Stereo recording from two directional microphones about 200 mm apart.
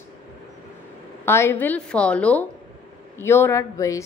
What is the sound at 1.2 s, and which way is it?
A woman's voice, 10° left (ahead or behind).